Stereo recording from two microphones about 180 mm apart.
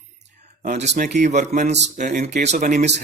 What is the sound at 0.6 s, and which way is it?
A man's voice, 40° right (ahead or behind).